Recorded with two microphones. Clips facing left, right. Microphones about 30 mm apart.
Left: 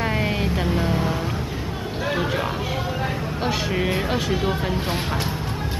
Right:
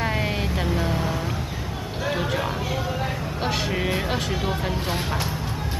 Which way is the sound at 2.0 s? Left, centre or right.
Centre.